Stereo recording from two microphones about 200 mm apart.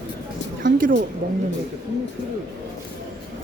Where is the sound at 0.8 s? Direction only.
45° right (ahead or behind).